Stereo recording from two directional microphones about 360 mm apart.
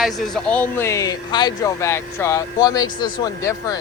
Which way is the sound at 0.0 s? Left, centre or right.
Centre.